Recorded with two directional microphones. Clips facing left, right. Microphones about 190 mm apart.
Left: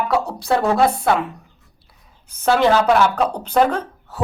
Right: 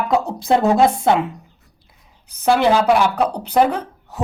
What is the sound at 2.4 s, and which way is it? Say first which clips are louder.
Speech: even; 10° right (ahead or behind).